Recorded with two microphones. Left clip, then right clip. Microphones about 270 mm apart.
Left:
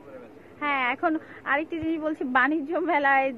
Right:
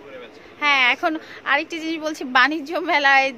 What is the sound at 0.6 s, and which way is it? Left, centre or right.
Speech, centre.